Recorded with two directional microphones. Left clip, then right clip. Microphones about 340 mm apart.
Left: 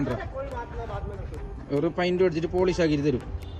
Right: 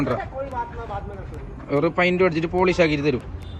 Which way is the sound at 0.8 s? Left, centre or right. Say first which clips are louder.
Right 4 dB; centre.